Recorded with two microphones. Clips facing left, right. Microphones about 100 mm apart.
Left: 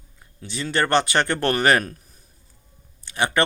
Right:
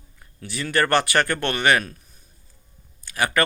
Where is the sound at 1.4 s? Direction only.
35° left (ahead or behind).